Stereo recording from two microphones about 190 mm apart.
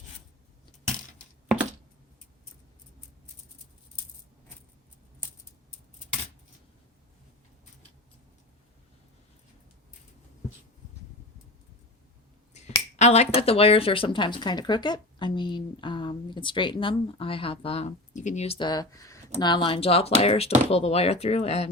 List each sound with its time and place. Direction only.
12.5 s speech: 35° left (ahead or behind)